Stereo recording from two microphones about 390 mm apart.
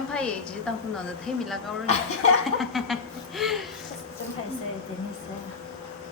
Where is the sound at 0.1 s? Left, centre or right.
Centre.